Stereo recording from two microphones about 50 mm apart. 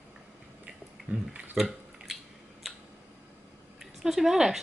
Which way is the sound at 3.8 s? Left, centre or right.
Centre.